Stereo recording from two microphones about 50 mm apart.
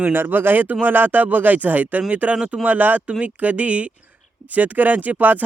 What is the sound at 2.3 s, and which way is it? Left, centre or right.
Speech, centre.